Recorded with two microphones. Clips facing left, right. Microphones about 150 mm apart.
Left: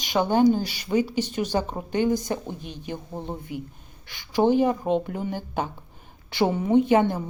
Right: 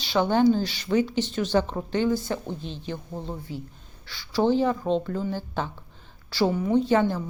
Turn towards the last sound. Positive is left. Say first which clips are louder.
# left 2 dB
turn(degrees=15)  # may be behind; listen again after turning